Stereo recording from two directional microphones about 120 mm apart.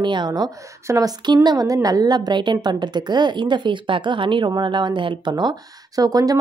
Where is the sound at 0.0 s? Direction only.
40° right (ahead or behind).